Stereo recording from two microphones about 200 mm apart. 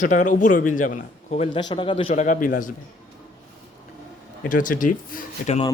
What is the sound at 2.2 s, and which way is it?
Speech, 40° left (ahead or behind).